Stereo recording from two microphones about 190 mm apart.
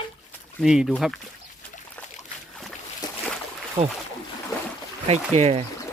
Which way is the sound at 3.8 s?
35° right (ahead or behind).